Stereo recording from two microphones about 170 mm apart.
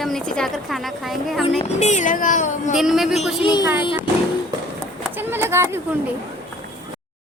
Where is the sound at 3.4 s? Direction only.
25° left (ahead or behind).